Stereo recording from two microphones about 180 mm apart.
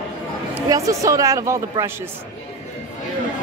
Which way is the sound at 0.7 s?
20° right (ahead or behind).